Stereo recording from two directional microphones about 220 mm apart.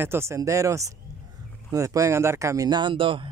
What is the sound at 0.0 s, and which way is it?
Speech, 10° right (ahead or behind).